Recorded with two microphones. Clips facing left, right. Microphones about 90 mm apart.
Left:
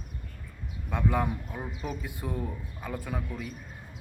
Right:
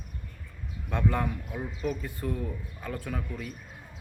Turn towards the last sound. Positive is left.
turn(degrees=10)  # may be behind; listen again after turning